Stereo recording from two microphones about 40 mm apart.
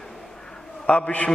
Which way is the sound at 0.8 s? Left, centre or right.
Left.